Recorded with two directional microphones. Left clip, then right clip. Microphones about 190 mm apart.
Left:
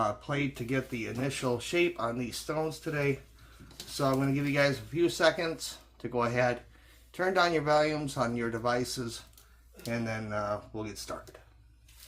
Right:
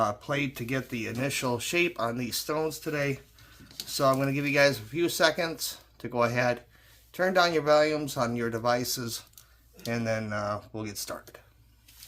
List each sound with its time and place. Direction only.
0.0 s speech: 40° right (ahead or behind)